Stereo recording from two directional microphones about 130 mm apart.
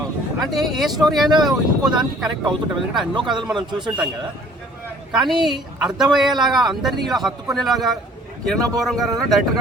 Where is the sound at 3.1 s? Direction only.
35° right (ahead or behind).